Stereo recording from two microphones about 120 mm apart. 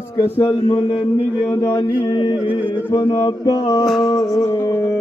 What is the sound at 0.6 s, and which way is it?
Speech, 50° left (ahead or behind).